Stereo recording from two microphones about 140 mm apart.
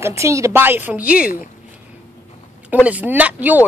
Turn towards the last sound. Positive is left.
turn(degrees=-10)  # may be behind; listen again after turning